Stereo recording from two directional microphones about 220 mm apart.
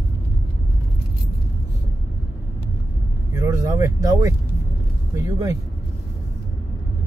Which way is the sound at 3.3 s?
15° right (ahead or behind).